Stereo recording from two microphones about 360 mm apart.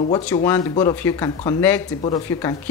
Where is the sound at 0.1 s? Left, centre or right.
Centre.